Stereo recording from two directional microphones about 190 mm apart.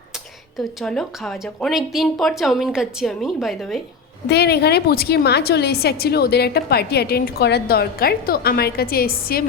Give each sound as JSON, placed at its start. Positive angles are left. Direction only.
{"t": 0.8, "sound": "speech", "side_deg": 0}
{"t": 4.3, "sound": "a woman's voice", "side_deg": 60}